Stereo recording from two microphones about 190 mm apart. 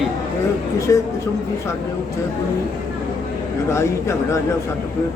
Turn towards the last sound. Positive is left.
turn(degrees=15)  # may be behind; listen again after turning